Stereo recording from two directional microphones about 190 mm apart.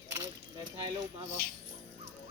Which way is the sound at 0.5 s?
25° right (ahead or behind).